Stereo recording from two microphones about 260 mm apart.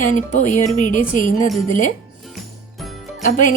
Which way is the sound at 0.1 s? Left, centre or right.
Left.